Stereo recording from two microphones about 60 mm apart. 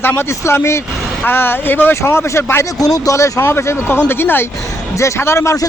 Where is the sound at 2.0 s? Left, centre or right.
Left.